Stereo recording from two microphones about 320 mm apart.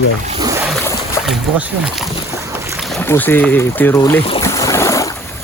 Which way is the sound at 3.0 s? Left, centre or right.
Centre.